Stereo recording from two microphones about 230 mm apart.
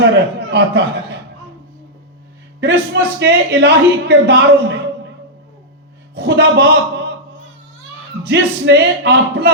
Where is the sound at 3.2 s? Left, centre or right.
Right.